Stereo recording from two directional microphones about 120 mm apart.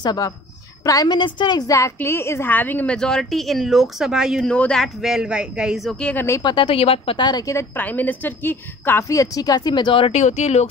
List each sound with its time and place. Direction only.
0.0 s a woman's voice: 35° left (ahead or behind); by 4.5 s 5° right (ahead or behind)
4.5 s a woman's voice: 10° left (ahead or behind)
5.9 s speech: 10° left (ahead or behind)
6.4 s a woman's voice: 45° left (ahead or behind)
7.2 s a woman's voice: 35° left (ahead or behind)
7.5 s a woman's voice: 15° left (ahead or behind); by 10.1 s 45° left (ahead or behind)
10.1 s speech: 70° left (ahead or behind)